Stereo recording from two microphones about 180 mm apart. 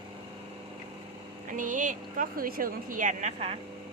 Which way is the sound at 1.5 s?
45° right (ahead or behind).